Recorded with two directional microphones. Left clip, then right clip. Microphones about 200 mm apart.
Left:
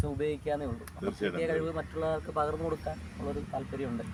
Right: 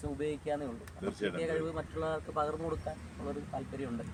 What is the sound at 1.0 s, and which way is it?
Speech, 10° right (ahead or behind).